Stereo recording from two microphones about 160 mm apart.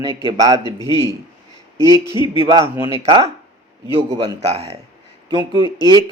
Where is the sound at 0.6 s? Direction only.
25° left (ahead or behind).